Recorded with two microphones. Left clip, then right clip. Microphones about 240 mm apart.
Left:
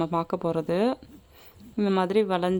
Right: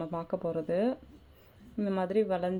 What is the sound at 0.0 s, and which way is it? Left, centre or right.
A woman's voice, left.